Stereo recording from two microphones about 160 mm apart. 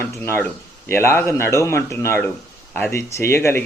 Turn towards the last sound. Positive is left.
turn(degrees=15)  # may be behind; listen again after turning